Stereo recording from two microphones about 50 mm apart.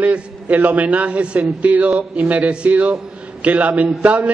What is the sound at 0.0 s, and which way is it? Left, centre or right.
A man's voice, right.